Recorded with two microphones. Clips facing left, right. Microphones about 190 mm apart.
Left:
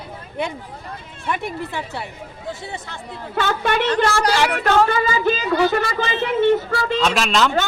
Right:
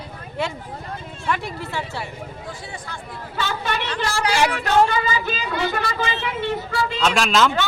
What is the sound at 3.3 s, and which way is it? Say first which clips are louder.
A woman's voice: left 6 dB; 55° left (ahead or behind).